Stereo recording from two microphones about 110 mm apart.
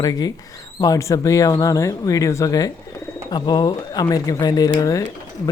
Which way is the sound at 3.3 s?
40° left (ahead or behind).